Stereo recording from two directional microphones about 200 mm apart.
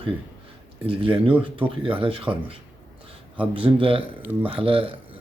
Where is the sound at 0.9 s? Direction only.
25° right (ahead or behind).